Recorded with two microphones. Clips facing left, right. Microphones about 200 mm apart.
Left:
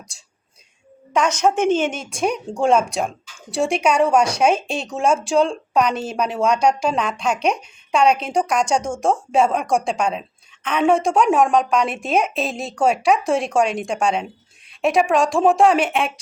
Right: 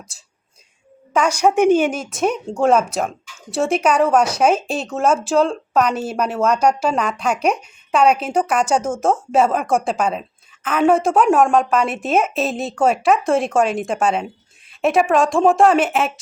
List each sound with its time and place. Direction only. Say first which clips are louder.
0.1 s a woman's voice: right 1 dB; 5° right (ahead or behind)